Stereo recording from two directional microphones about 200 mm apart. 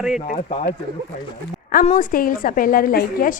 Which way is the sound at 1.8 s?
45° left (ahead or behind).